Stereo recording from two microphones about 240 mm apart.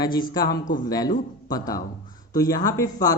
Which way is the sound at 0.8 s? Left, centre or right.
Centre.